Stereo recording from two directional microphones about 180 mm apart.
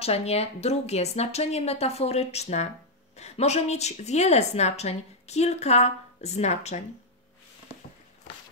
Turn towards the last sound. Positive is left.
turn(degrees=40)  # may be behind; listen again after turning